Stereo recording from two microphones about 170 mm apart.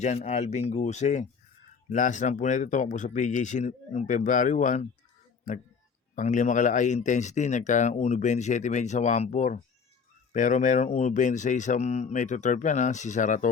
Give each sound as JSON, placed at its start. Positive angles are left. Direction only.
{"t": 0.3, "sound": "speech", "side_deg": 40}
{"t": 6.1, "sound": "speech", "side_deg": 45}